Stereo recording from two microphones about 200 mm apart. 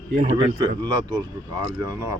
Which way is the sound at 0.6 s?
20° right (ahead or behind).